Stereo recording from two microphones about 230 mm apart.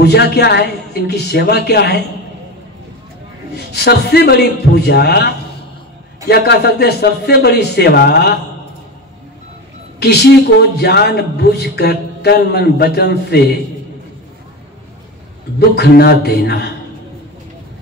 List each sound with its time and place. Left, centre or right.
0.0 s speech: left
3.5 s speech: left
9.9 s speech: left
15.7 s speech: left